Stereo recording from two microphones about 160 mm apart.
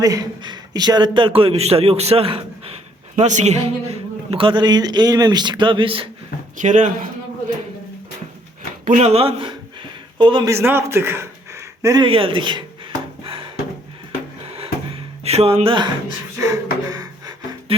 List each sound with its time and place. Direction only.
0.0 s a man's voice: 25° right (ahead or behind)
6.6 s speech: 50° right (ahead or behind)
8.9 s a man's voice: 45° right (ahead or behind)
10.5 s a man's voice: 15° right (ahead or behind)
12.0 s a man's voice: 35° right (ahead or behind)
13.2 s wood: 35° right (ahead or behind)
15.2 s speech: 40° right (ahead or behind)
16.4 s a sound: 20° right (ahead or behind)